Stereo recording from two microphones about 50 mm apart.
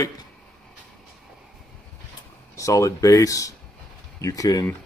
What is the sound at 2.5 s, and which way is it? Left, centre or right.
Speech, left.